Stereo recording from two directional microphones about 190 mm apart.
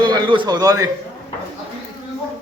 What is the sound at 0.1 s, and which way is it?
Speech, 25° right (ahead or behind).